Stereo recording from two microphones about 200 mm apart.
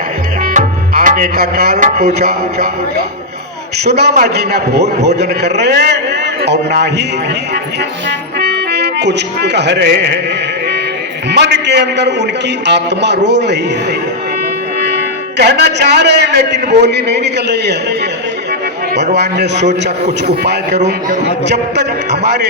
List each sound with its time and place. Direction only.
0.5 s music: 40° right (ahead or behind)
2.1 s speech: 50° right (ahead or behind)
3.8 s a man's voice: 55° right (ahead or behind)
8.4 s speech: 55° right (ahead or behind)
11.3 s a man's voice: 60° right (ahead or behind)
15.4 s a man's voice: 55° right (ahead or behind)
19.1 s a man's voice: 60° right (ahead or behind)
19.6 s a man's voice: 35° right (ahead or behind)
21.4 s a man's voice: 60° right (ahead or behind)